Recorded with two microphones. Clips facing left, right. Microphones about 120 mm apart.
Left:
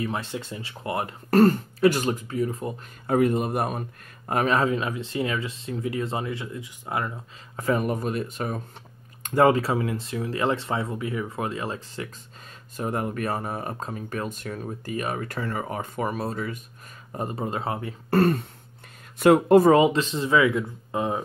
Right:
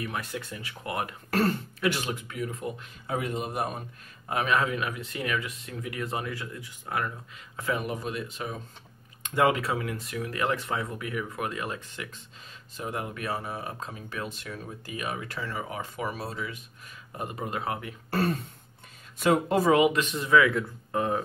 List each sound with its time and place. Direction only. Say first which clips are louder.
0.0 s speech: left 4 dB; 25° left (ahead or behind)
1.3 s speech: left 9 dB; 45° left (ahead or behind)
3.1 s speech: left 9 dB; 50° left (ahead or behind)
4.3 s speech: left 4 dB; 40° left (ahead or behind); by 7.2 s 20° left (ahead or behind)
7.5 s speech: left 6 dB; 40° left (ahead or behind)
9.2 s speech: left 5 dB; 40° left (ahead or behind)
12.7 s speech: left 6 dB; 45° left (ahead or behind)
17.2 s speech: left 4 dB; 35° left (ahead or behind)
18.1 s speech: left 7 dB; 60° left (ahead or behind)
19.7 s speech: left 4 dB; 30° left (ahead or behind)